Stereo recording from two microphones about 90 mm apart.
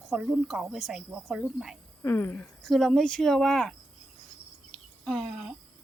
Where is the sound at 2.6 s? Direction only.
5° left (ahead or behind).